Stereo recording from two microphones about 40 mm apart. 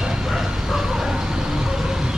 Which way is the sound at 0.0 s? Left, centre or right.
Centre.